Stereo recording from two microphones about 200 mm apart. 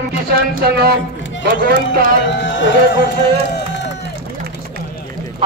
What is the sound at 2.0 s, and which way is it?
Speech, 65° left (ahead or behind).